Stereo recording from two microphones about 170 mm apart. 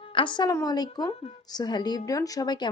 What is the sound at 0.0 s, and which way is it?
Speech, 30° left (ahead or behind).